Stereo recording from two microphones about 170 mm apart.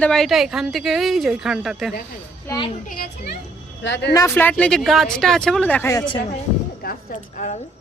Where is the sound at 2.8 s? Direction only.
60° left (ahead or behind).